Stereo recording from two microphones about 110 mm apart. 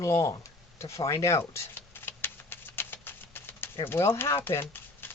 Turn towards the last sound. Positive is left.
turn(degrees=20)  # may be behind; listen again after turning